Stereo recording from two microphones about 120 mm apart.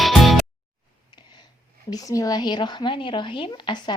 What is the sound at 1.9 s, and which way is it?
Speech, 30° left (ahead or behind).